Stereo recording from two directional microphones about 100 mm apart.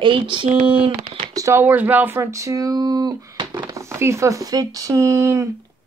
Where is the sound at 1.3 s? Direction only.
35° right (ahead or behind).